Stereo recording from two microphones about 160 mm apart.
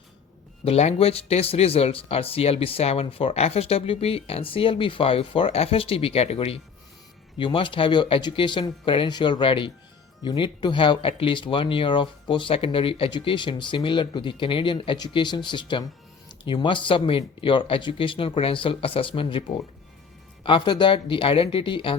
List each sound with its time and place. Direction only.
0.6 s speech: 40° left (ahead or behind)